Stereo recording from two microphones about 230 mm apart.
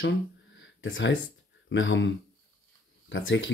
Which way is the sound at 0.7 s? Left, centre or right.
Left.